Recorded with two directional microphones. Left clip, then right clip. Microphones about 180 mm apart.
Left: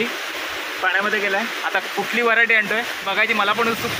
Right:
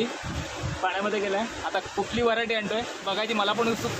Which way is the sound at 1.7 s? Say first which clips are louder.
Left 6 dB; centre (ahead or behind).